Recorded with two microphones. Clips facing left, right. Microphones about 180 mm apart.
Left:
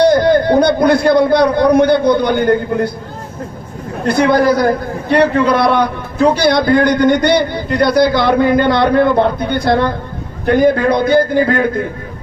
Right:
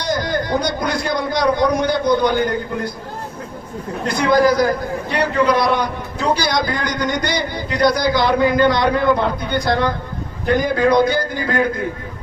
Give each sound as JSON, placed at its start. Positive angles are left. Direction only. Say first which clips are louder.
{"t": 0.0, "sound": "a man's voice", "louder": "left 11 dB", "side_deg": 60}
{"t": 4.0, "sound": "a man's voice", "louder": "left 4 dB", "side_deg": 60}